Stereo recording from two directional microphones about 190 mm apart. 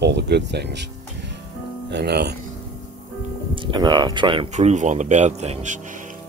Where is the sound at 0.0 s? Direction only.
65° right (ahead or behind).